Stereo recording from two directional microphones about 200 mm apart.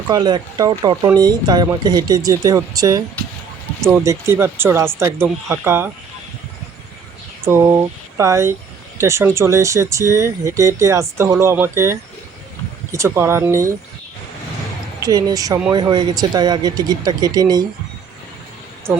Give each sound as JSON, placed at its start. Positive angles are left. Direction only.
{"t": 0.1, "sound": "speech", "side_deg": -20}
{"t": 7.4, "sound": "speech", "side_deg": -15}
{"t": 15.0, "sound": "speech", "side_deg": -20}